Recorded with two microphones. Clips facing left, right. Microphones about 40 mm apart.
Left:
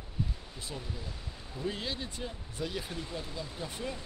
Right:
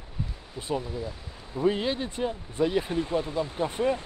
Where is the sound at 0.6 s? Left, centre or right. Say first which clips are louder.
Right 13 dB; right.